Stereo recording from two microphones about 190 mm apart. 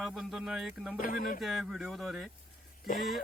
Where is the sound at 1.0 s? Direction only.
45° left (ahead or behind).